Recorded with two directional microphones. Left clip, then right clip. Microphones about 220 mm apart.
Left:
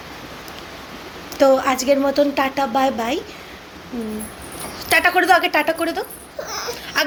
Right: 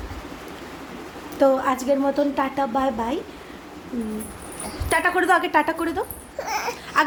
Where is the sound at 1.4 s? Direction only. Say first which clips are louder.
Left 4 dB; 5° right (ahead or behind).